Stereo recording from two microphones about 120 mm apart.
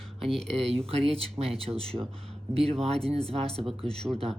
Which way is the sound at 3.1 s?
55° right (ahead or behind).